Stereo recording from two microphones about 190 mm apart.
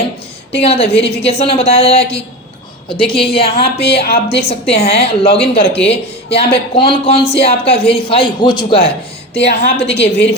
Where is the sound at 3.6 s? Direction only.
60° left (ahead or behind).